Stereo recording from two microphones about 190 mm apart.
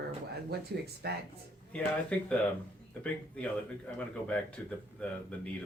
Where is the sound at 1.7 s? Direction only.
5° left (ahead or behind).